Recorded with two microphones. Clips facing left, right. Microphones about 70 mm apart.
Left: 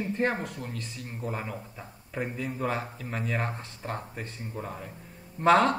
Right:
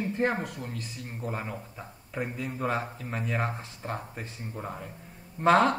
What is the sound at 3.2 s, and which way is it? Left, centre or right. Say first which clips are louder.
Speech: right 1 dB; left.